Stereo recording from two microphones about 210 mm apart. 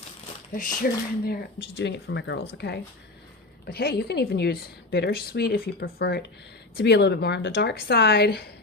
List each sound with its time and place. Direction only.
0.8 s a woman's voice: 45° left (ahead or behind)